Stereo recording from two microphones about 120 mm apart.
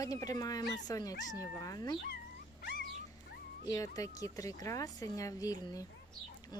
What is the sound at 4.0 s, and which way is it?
Speech, 30° left (ahead or behind).